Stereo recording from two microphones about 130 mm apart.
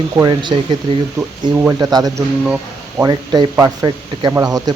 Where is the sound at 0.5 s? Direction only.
40° right (ahead or behind).